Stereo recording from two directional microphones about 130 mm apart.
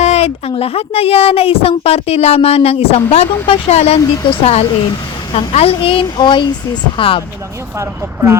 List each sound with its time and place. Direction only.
0.0 s a child's voice: 55° left (ahead or behind)
7.8 s speech: 20° right (ahead or behind)